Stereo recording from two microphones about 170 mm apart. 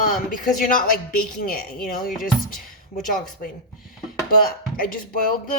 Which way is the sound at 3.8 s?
Centre (ahead or behind).